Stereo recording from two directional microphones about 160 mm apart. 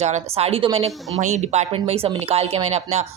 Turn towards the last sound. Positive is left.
turn(degrees=-40)  # may be behind; listen again after turning